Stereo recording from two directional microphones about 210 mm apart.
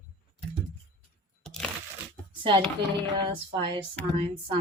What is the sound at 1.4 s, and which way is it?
Crushing, centre (ahead or behind).